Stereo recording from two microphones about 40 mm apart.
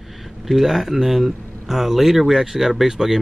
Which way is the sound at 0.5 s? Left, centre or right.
Centre.